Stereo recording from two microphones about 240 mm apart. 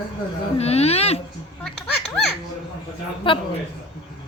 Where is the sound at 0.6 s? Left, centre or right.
Left.